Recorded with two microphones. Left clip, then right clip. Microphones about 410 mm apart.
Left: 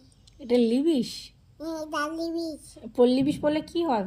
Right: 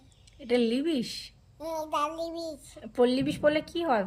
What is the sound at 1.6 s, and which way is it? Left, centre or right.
Child singing, centre.